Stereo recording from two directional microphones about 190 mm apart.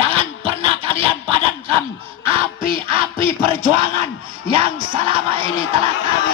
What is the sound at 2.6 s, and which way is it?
A man's voice, 25° right (ahead or behind).